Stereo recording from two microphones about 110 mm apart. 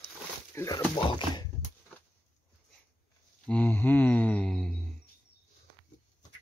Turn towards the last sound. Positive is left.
turn(degrees=10)  # may be behind; listen again after turning